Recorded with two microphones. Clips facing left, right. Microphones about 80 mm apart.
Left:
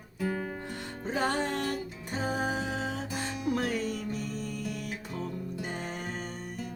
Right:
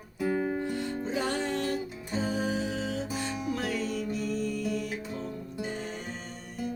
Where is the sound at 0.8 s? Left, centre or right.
Left.